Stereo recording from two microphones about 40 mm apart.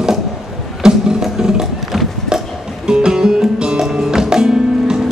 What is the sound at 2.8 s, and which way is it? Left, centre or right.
Music, centre.